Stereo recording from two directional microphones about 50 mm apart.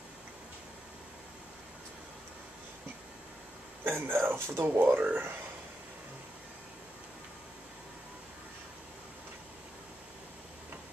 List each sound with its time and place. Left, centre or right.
3.8 s speech: right
4.7 s speech: right